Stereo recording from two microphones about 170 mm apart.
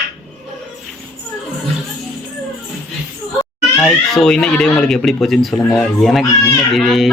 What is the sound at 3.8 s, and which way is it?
A child's voice, centre (ahead or behind).